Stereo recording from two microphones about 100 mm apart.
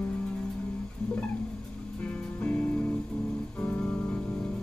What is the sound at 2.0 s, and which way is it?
Music, 10° left (ahead or behind).